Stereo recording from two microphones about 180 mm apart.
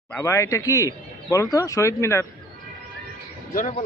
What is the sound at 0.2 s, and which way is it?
A man's voice, 15° left (ahead or behind).